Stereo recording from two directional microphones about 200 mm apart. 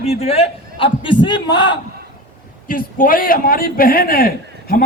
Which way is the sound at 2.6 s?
45° left (ahead or behind).